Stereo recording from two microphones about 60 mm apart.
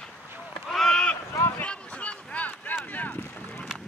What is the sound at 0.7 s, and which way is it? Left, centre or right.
Rowboat, centre.